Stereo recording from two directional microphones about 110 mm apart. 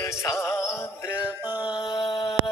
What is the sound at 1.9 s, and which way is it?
Mantra, 50° left (ahead or behind).